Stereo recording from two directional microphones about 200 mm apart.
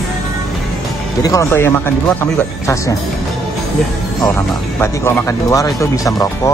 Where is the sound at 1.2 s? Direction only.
15° left (ahead or behind).